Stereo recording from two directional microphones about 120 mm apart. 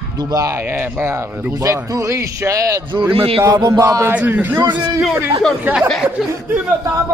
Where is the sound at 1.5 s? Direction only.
30° right (ahead or behind).